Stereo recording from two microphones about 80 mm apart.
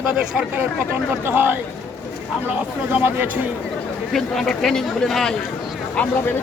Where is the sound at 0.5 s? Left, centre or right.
Right.